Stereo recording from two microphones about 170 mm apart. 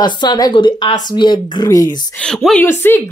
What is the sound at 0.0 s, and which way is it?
Speech, 25° left (ahead or behind).